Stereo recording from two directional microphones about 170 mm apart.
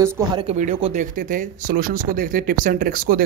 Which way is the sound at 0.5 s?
35° right (ahead or behind).